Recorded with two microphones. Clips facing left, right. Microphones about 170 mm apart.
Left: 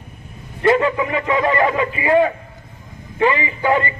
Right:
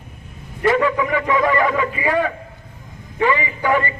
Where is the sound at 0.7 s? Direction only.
20° left (ahead or behind).